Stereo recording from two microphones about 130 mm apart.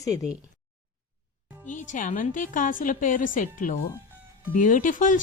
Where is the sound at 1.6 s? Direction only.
80° left.